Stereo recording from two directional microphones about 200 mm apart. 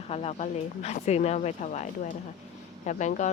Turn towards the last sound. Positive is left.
turn(degrees=35)  # may be behind; listen again after turning